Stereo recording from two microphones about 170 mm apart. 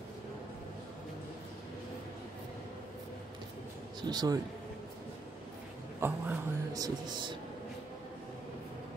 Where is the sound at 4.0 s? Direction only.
25° right (ahead or behind).